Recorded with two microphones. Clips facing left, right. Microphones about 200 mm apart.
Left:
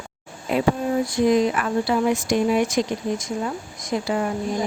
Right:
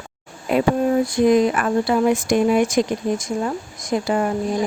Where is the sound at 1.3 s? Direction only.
50° right (ahead or behind).